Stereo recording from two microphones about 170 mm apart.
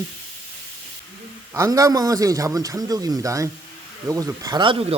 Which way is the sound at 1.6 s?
20° right (ahead or behind).